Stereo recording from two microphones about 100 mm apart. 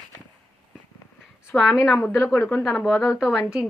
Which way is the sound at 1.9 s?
25° left (ahead or behind).